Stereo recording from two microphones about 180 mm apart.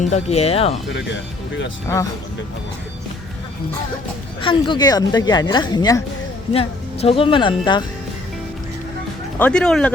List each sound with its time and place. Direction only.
0.1 s speech: 35° left (ahead or behind)
0.9 s speech: 90° left
4.4 s speech: 25° left (ahead or behind)
9.4 s speech: 5° left (ahead or behind)